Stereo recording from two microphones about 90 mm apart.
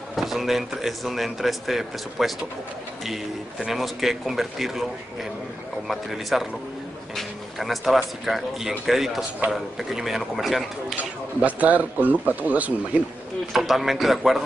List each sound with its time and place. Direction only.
0.1 s speech: centre (ahead or behind)
5.9 s speech: centre (ahead or behind)
11.4 s speech: 15° right (ahead or behind)
13.5 s speech: centre (ahead or behind)